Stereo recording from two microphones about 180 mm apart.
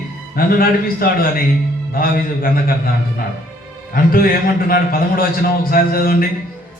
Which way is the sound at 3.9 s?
55° left (ahead or behind).